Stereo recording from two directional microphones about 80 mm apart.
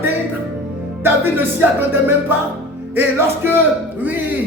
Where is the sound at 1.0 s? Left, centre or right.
Right.